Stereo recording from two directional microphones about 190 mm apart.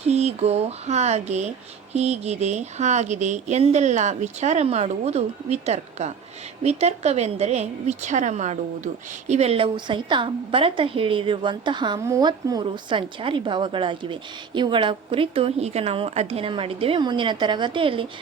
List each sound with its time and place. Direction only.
0.0 s a woman's voice: 35° right (ahead or behind)